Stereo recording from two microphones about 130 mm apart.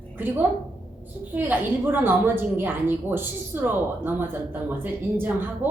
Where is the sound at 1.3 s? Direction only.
15° right (ahead or behind).